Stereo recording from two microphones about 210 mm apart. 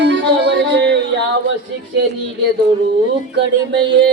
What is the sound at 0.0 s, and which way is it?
Music, 55° right (ahead or behind).